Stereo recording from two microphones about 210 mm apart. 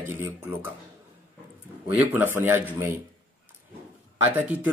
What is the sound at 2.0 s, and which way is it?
Speech, 10° right (ahead or behind).